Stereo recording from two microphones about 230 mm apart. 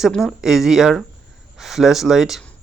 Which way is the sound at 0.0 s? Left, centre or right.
Centre.